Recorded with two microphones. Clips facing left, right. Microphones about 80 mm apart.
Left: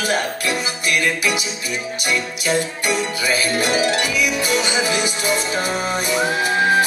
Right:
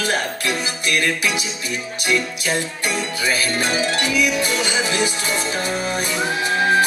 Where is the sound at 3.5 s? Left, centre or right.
Centre.